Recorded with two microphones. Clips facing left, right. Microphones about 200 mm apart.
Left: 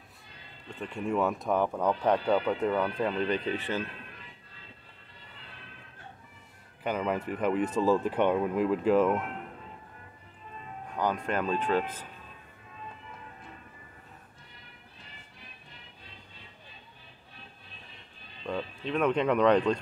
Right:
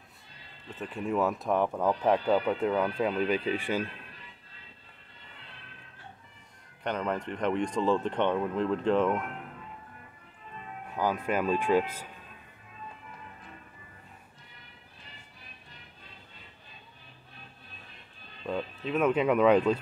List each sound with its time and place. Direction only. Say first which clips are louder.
0.7 s speech: even; 5° right (ahead or behind)
6.8 s speech: left 1 dB; 5° left (ahead or behind)
10.9 s speech: right 1 dB; 5° right (ahead or behind)
18.4 s speech: right 1 dB; 5° right (ahead or behind)